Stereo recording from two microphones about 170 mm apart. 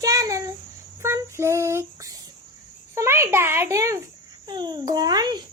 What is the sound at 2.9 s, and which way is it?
A child's voice, 15° right (ahead or behind).